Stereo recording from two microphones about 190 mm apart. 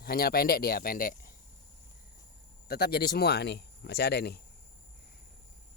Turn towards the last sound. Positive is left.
turn(degrees=60)  # may be behind; listen again after turning